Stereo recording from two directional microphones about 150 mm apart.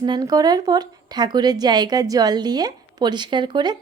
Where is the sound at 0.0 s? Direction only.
30° right (ahead or behind).